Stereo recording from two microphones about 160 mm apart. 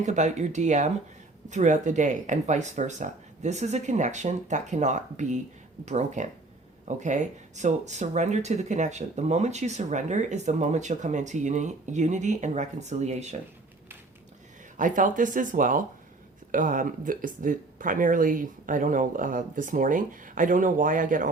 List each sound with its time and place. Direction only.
0.0 s speech: 45° right (ahead or behind)
14.8 s speech: 55° right (ahead or behind)